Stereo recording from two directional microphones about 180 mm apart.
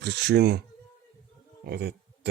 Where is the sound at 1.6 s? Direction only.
60° right (ahead or behind).